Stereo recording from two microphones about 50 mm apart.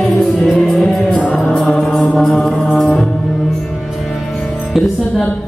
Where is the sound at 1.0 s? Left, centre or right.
Left.